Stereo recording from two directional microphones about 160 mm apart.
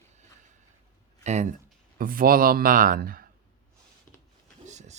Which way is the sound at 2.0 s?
65° right (ahead or behind).